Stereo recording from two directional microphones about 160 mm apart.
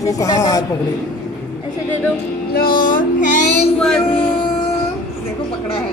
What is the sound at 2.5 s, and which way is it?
Music, 65° left (ahead or behind).